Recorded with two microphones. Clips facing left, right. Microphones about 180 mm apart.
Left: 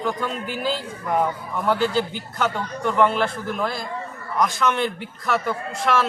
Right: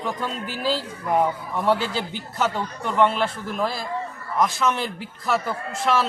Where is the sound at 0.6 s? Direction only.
35° right (ahead or behind).